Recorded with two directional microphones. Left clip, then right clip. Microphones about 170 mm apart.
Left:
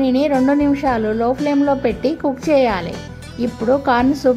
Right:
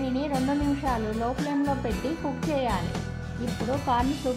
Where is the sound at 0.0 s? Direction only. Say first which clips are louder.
Left 13 dB; 15° left (ahead or behind).